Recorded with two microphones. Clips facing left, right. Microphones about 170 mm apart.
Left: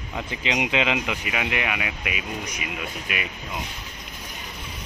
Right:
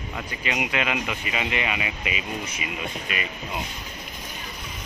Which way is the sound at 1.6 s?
5° left (ahead or behind).